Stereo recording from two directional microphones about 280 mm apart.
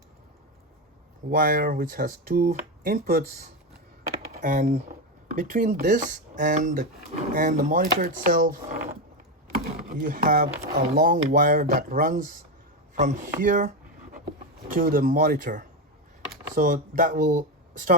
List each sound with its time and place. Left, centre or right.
1.3 s speech: right